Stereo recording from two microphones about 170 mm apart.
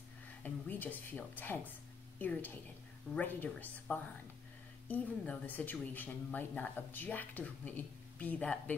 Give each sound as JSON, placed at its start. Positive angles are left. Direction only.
{"t": 0.4, "sound": "a woman's voice", "side_deg": 10}